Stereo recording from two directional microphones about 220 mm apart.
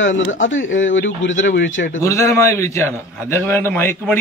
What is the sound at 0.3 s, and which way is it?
Speech, 60° left (ahead or behind).